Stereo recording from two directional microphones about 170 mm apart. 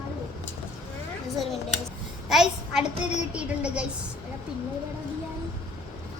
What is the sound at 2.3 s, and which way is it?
A child's voice, 5° right (ahead or behind).